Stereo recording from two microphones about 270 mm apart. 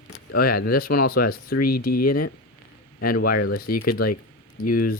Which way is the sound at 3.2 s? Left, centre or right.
Left.